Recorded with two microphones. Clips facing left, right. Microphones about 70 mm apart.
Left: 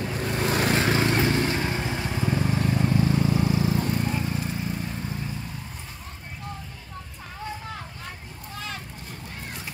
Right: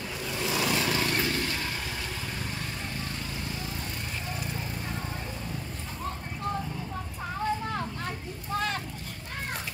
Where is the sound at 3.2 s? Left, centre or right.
Left.